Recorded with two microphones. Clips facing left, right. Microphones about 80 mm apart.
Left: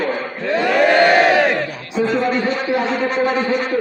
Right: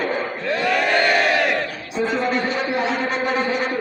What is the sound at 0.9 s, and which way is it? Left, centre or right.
Crowd, left.